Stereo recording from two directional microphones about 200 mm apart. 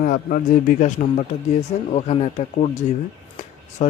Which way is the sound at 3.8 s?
35° left (ahead or behind).